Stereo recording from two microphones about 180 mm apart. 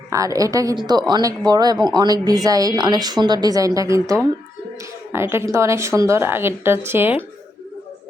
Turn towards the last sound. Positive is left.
turn(degrees=-10)  # may be behind; listen again after turning